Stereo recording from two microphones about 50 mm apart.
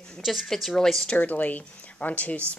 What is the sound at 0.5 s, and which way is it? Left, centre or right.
Speech, centre.